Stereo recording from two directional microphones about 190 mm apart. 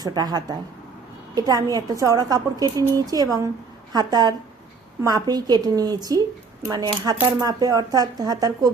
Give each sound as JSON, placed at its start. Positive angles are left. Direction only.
{"t": 0.0, "sound": "a woman's voice", "side_deg": -20}